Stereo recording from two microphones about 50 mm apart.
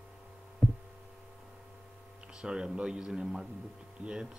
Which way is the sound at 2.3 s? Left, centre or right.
Centre.